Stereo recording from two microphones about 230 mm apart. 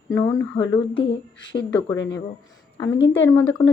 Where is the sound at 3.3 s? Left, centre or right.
Centre.